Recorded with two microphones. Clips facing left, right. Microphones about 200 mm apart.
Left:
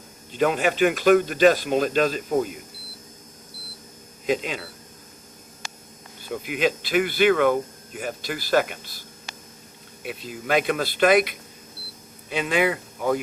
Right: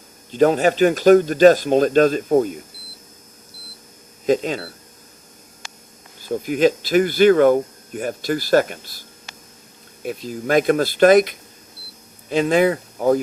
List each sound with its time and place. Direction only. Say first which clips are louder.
0.3 s speech: right 6 dB; 40° right (ahead or behind)
4.3 s speech: right 6 dB; 45° right (ahead or behind)
6.2 s speech: right 7 dB; 40° right (ahead or behind)
10.0 s speech: right 7 dB; 45° right (ahead or behind)